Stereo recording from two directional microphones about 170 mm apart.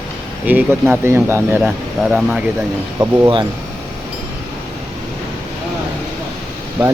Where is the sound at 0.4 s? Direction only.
10° right (ahead or behind).